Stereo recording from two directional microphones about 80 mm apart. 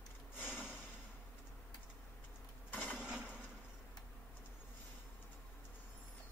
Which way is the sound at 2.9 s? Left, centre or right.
Centre.